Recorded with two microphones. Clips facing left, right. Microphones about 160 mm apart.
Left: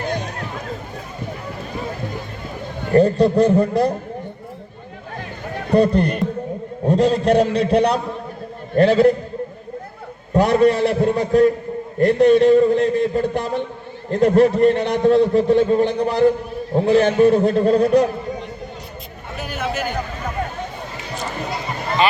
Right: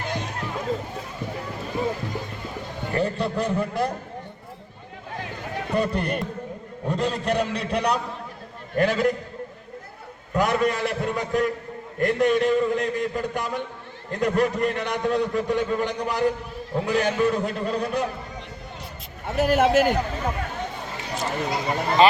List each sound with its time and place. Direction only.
2.9 s a man's voice: 40° left (ahead or behind)
5.7 s a man's voice: 35° left (ahead or behind)
10.3 s a man's voice: 30° left (ahead or behind)
19.4 s a man's voice: 90° right